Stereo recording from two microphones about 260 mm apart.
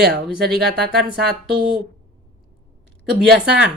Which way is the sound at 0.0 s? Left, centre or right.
Right.